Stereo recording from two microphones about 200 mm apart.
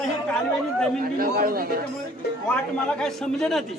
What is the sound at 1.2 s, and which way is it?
Speech, 45° right (ahead or behind).